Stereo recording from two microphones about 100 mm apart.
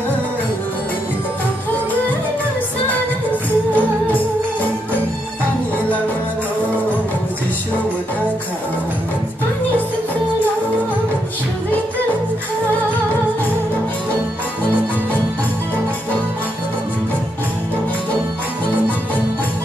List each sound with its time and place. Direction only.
3.7 s music: 15° left (ahead or behind)